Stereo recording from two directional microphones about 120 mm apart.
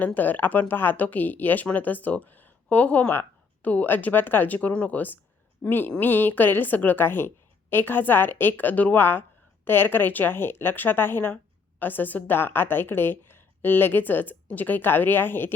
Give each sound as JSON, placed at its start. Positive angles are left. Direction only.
{"t": 0.0, "sound": "speech", "side_deg": 15}